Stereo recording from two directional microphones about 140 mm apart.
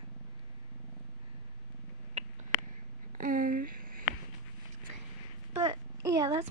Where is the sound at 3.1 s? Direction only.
80° right.